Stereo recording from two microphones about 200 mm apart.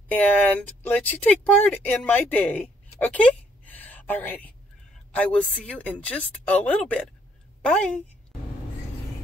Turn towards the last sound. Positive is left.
turn(degrees=5)  # may be behind; listen again after turning